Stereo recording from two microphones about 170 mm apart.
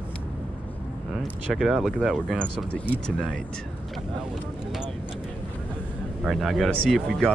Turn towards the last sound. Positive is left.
turn(degrees=0)  # may be behind; listen again after turning